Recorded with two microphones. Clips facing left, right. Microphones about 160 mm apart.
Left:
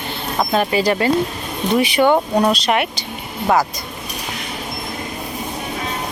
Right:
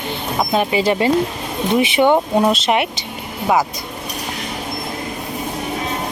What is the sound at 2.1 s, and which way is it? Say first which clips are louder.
Speech: right 1 dB; 5° right (ahead or behind).